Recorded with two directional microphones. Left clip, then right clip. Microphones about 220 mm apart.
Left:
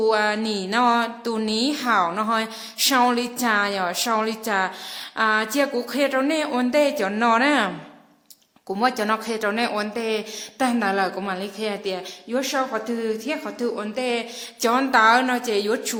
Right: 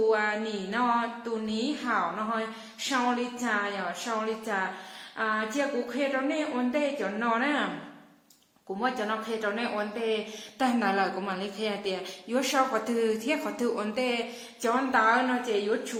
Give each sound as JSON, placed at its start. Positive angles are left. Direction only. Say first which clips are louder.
{"t": 0.1, "sound": "speech", "louder": "left 6 dB", "side_deg": 55}
{"t": 8.8, "sound": "speech", "louder": "left 8 dB", "side_deg": 40}
{"t": 10.6, "sound": "a woman's voice", "louder": "left 5 dB", "side_deg": 25}
{"t": 14.6, "sound": "speech", "louder": "left 7 dB", "side_deg": 40}